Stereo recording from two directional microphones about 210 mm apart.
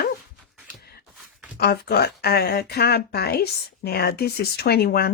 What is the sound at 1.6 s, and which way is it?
Speech, 50° left (ahead or behind).